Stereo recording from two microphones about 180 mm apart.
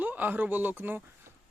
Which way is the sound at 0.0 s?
10° right (ahead or behind).